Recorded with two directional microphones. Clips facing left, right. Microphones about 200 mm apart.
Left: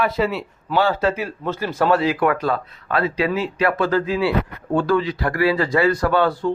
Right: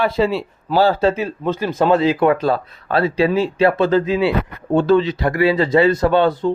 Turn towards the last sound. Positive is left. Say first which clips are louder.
# right 3 dB
turn(degrees=-20)  # may be behind; listen again after turning